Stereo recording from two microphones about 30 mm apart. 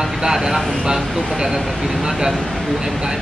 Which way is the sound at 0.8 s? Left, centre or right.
Right.